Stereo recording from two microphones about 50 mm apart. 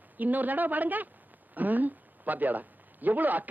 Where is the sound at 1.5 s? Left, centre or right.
Right.